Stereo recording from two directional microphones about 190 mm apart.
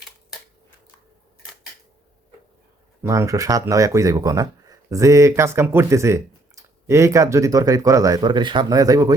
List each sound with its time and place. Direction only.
3.0 s speech: 15° right (ahead or behind)